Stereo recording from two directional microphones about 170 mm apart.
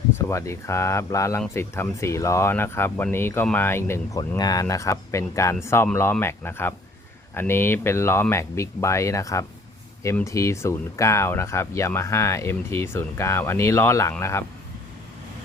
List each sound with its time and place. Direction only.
0.3 s speech: 15° left (ahead or behind)